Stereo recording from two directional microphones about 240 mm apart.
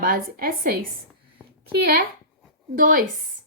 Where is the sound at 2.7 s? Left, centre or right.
Right.